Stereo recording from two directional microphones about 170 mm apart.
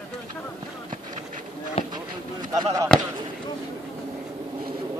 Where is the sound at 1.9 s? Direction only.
25° right (ahead or behind).